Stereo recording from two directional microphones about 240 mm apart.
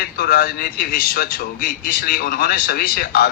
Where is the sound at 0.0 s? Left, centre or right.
Left.